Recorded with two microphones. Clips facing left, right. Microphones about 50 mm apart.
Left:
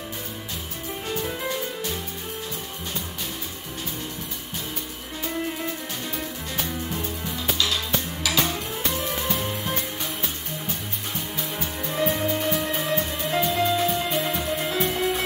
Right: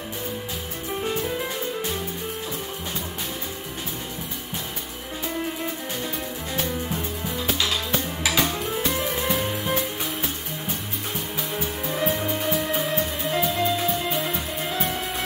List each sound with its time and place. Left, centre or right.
6.6 s music: centre
11.3 s music: centre